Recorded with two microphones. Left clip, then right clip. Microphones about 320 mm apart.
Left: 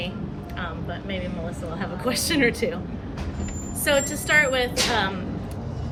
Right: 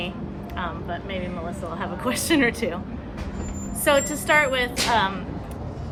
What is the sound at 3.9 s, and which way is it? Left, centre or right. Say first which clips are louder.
A woman's voice: right 1 dB; centre.